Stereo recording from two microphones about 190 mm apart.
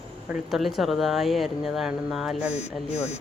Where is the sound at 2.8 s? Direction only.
35° left (ahead or behind).